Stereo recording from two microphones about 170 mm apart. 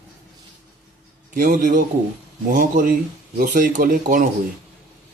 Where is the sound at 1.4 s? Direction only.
50° right (ahead or behind).